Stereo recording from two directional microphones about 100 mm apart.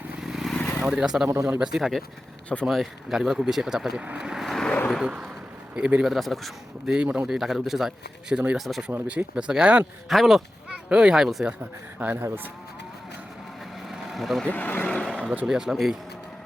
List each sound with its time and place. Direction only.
0.2 s vehicle: 5° right (ahead or behind)
0.8 s speech: 5° right (ahead or behind)
6.9 s speech: 10° right (ahead or behind)
11.9 s speech: 20° right (ahead or behind)
13.8 s vehicle: centre (ahead or behind)
14.4 s speech: 15° left (ahead or behind)
15.4 s speech: 5° right (ahead or behind)